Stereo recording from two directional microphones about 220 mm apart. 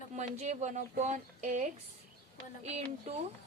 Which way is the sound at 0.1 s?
30° right (ahead or behind).